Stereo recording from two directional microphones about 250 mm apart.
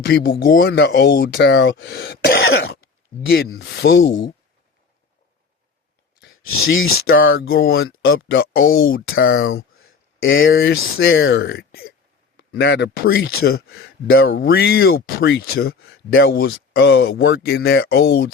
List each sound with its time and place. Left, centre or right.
0.0 s speech: left
3.2 s speech: left
6.1 s speech: left
12.4 s speech: left
13.7 s speech: left
14.2 s speech: left
15.8 s speech: left
16.2 s speech: left